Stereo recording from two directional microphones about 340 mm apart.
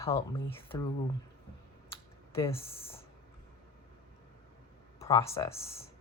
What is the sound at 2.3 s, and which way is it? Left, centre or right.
Speech, centre.